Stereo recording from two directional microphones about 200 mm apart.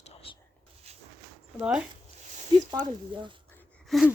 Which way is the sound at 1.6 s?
5° right (ahead or behind).